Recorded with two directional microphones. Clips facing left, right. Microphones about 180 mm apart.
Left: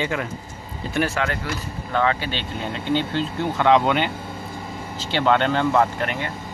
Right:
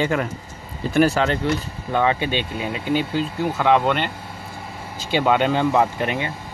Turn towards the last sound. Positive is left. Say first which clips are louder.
# right 1 dB
turn(degrees=-15)  # may be behind; listen again after turning